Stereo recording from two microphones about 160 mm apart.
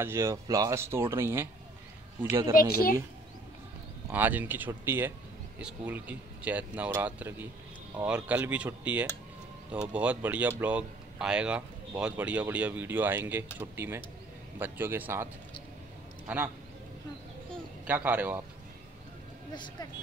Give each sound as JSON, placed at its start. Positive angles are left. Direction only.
{"t": 0.0, "sound": "speech", "side_deg": -15}
{"t": 2.7, "sound": "speech", "side_deg": 65}
{"t": 4.1, "sound": "speech", "side_deg": -10}
{"t": 16.3, "sound": "speech", "side_deg": -10}
{"t": 17.8, "sound": "speech", "side_deg": -10}
{"t": 19.5, "sound": "speech", "side_deg": 30}